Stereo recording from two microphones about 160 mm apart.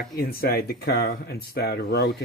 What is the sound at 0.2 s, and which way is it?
Speech, 70° left (ahead or behind).